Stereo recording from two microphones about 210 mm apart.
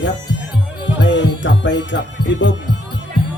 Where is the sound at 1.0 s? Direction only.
60° left (ahead or behind).